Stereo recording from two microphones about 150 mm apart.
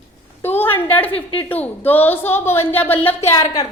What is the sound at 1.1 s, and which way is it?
Speech, 40° left (ahead or behind).